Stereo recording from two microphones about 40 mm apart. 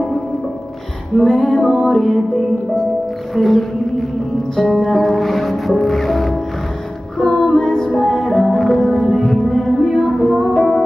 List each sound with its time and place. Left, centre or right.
1.1 s music: centre
3.3 s music: centre
4.7 s music: centre